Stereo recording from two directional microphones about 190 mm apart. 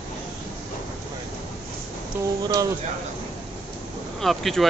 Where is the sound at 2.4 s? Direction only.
20° right (ahead or behind).